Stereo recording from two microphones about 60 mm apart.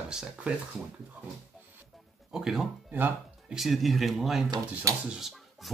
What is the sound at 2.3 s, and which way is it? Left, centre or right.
Speech, centre.